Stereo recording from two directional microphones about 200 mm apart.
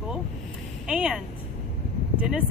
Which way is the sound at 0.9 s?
5° right (ahead or behind).